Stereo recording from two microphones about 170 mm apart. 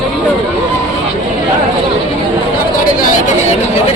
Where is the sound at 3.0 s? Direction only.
45° left (ahead or behind).